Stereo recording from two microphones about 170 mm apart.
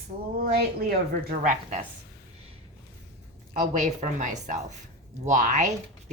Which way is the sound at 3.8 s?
50° right (ahead or behind).